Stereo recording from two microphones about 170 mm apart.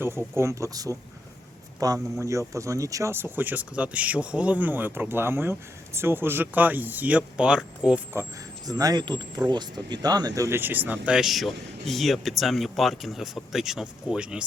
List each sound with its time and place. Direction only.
0.3 s speech: 15° right (ahead or behind)